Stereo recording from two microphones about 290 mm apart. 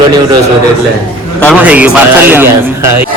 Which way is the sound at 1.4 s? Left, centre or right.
Centre.